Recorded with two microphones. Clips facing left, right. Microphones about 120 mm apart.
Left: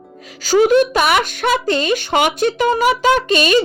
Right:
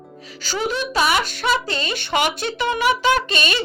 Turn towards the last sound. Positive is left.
turn(degrees=45)  # may be behind; listen again after turning